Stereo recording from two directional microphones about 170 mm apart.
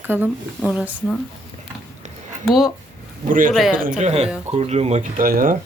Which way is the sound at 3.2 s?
50° right (ahead or behind).